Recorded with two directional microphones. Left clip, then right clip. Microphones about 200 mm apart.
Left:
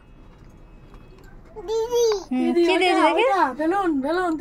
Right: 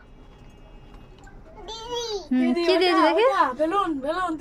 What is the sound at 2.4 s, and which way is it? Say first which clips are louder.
A woman's voice: left 1 dB; 15° right (ahead or behind).